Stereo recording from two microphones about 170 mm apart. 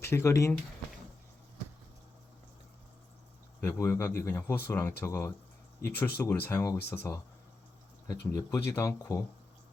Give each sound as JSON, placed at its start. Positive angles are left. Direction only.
{"t": 0.0, "sound": "speech", "side_deg": 15}
{"t": 3.6, "sound": "speech", "side_deg": 15}